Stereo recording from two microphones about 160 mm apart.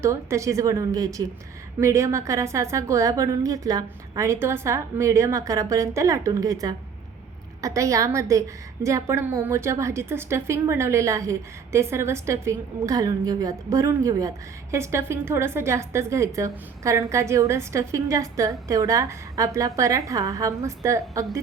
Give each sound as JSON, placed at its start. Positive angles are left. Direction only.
{"t": 0.0, "sound": "a woman's voice", "side_deg": -20}